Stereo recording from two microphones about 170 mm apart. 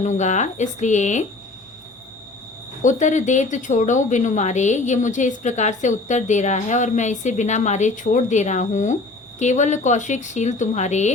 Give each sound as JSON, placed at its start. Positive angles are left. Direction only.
{"t": 0.0, "sound": "a woman's voice", "side_deg": 45}
{"t": 2.8, "sound": "a woman's voice", "side_deg": 45}